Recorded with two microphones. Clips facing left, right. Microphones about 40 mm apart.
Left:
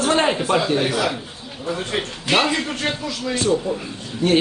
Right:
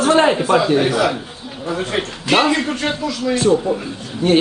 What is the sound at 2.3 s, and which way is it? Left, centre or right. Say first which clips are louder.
A woman's voice: right 4 dB; centre.